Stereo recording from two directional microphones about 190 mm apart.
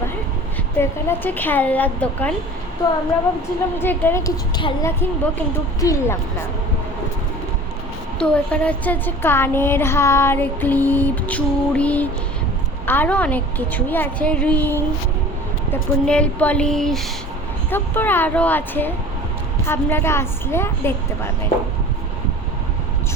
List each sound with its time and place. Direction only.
0.8 s a woman's voice: 10° left (ahead or behind)
3.8 s a woman's voice: 10° left (ahead or behind)
8.2 s a woman's voice: 5° left (ahead or behind)